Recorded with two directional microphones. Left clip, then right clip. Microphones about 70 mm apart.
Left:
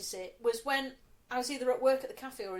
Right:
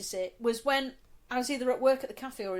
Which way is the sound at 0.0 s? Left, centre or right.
Right.